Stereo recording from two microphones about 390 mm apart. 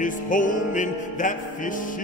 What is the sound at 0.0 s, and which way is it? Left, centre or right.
Music, centre.